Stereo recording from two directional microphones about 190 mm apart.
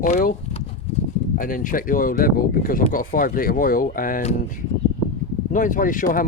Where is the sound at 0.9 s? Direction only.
35° left (ahead or behind).